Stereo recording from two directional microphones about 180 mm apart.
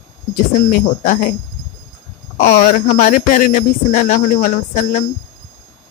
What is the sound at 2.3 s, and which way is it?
Speech, 45° left (ahead or behind).